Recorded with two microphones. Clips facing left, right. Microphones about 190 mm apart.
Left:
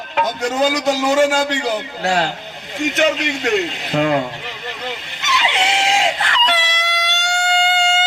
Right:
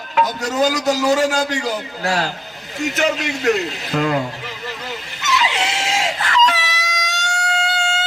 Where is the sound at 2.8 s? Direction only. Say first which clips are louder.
Left 2 dB; 40° right (ahead or behind).